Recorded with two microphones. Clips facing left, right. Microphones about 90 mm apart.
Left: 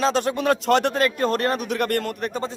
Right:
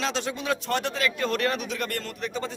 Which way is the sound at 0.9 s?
45° left (ahead or behind).